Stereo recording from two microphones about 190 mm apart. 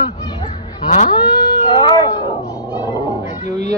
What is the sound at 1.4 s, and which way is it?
Cat, 25° left (ahead or behind).